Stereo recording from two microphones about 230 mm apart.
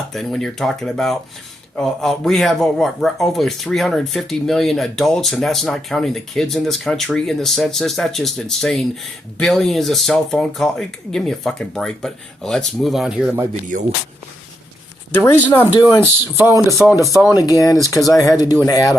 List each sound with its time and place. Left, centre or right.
0.1 s speech: centre
15.1 s speech: centre